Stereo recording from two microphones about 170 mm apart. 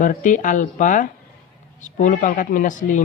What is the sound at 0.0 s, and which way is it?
Speech, 50° left (ahead or behind).